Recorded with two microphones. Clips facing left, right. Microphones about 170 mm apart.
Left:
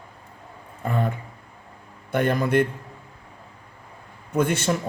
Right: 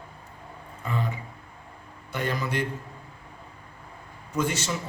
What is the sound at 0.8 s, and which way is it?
A man's voice, 55° left (ahead or behind).